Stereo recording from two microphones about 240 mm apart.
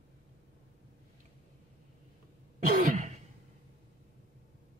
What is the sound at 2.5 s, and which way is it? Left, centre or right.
Throat clearing, right.